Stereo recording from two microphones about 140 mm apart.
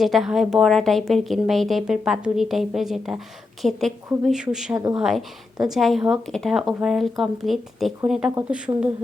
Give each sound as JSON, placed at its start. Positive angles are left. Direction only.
{"t": 0.0, "sound": "speech", "side_deg": 0}
{"t": 4.7, "sound": "speech", "side_deg": -25}
{"t": 4.9, "sound": "speech", "side_deg": -5}